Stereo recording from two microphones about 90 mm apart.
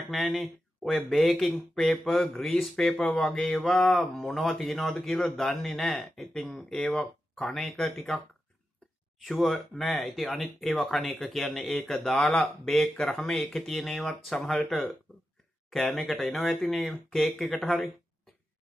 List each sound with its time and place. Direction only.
0.1 s speech: centre (ahead or behind)
9.2 s speech: centre (ahead or behind)
12.9 s speech: 15° left (ahead or behind)
13.5 s speech: centre (ahead or behind)
15.7 s speech: centre (ahead or behind)